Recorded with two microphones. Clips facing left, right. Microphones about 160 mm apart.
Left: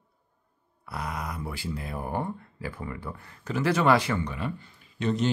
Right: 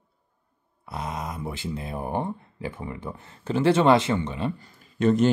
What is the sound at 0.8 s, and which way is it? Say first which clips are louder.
Speech: right 2 dB; 20° right (ahead or behind).